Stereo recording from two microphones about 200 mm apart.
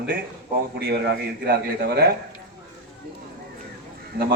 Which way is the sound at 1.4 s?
50° right (ahead or behind).